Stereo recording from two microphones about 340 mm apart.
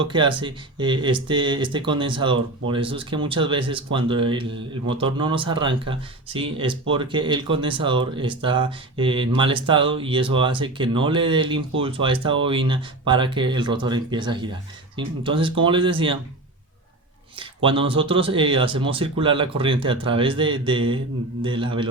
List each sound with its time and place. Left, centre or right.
0.0 s speech: centre
17.3 s speech: centre